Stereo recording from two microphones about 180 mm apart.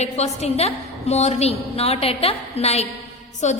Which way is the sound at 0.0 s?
35° left (ahead or behind).